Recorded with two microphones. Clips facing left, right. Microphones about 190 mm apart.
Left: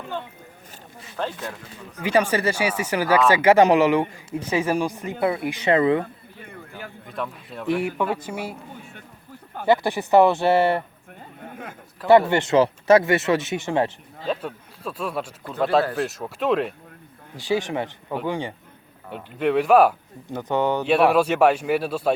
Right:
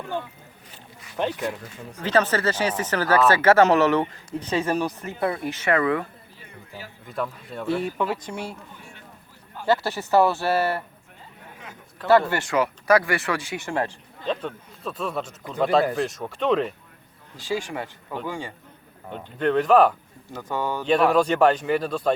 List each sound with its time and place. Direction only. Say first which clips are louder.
1.1 s speech: right 3 dB; 15° right (ahead or behind)
2.0 s speech: left 1 dB; 10° left (ahead or behind)
6.4 s a sound: left 3 dB; 55° left (ahead or behind)
7.1 s speech: right 2 dB; centre (ahead or behind)
7.7 s speech: left 2 dB; 15° left (ahead or behind)
9.6 s speech: left 3 dB; 15° left (ahead or behind)
11.4 s a sound: left 7 dB; 50° left (ahead or behind)
12.3 s speech: left 5 dB; 25° left (ahead or behind)
14.3 s speech: left 1 dB; 5° left (ahead or behind)
17.4 s speech: left 4 dB; 20° left (ahead or behind)
19.1 s speech: left 1 dB; 5° left (ahead or behind)
20.3 s speech: left 6 dB; 20° left (ahead or behind)
20.8 s speech: right 1 dB; 10° left (ahead or behind)